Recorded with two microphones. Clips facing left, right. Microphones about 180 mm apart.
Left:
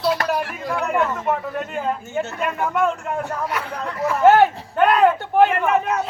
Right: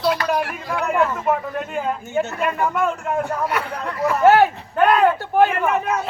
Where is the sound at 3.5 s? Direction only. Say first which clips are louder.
Right 2 dB; 60° right (ahead or behind).